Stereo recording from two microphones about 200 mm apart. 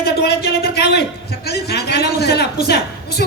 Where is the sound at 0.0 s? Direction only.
50° left (ahead or behind).